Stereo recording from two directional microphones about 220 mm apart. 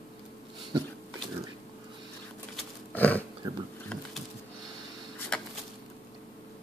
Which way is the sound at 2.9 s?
5° left (ahead or behind).